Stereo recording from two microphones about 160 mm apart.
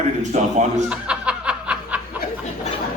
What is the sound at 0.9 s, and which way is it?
Snicker, 5° right (ahead or behind).